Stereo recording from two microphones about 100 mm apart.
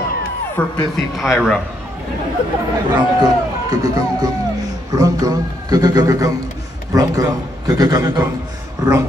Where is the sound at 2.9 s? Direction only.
40° right (ahead or behind).